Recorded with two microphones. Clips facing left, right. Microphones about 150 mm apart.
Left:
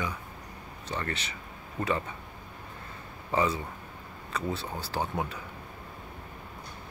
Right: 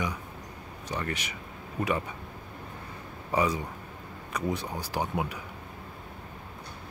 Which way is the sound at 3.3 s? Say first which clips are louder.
Right 1 dB; 15° right (ahead or behind).